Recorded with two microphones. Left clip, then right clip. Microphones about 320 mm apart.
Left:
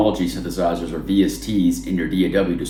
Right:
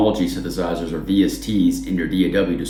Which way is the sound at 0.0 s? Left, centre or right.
Centre.